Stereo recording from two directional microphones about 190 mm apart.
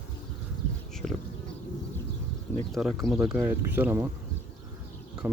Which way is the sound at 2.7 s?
Centre (ahead or behind).